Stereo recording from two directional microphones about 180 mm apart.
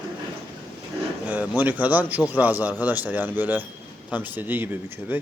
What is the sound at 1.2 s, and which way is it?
Speech, 10° right (ahead or behind).